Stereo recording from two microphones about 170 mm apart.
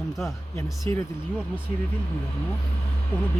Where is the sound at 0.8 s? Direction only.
15° left (ahead or behind).